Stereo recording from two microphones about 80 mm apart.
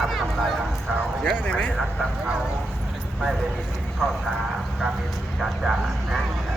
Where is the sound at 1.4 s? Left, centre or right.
Centre.